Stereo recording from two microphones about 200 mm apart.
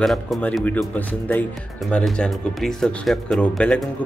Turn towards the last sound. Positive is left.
turn(degrees=5)  # may be behind; listen again after turning